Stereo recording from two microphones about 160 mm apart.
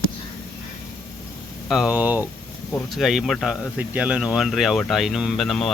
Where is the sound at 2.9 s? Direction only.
Centre (ahead or behind).